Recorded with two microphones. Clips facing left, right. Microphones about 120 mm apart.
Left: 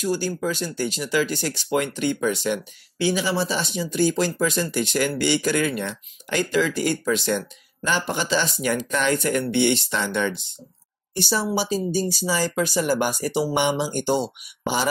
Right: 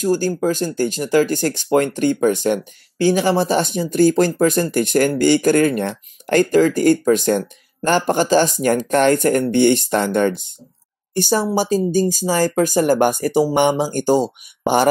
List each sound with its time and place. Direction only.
0.0 s speech: 45° right (ahead or behind)